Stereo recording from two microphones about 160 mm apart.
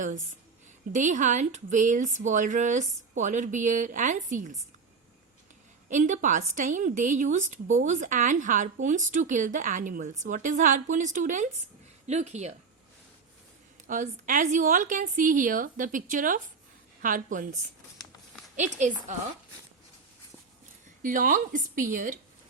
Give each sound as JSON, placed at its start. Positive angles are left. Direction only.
{"t": 0.9, "sound": "a woman's voice", "side_deg": -50}
{"t": 5.9, "sound": "a woman's voice", "side_deg": -50}
{"t": 13.8, "sound": "a woman's voice", "side_deg": -55}
{"t": 21.0, "sound": "a woman's voice", "side_deg": -55}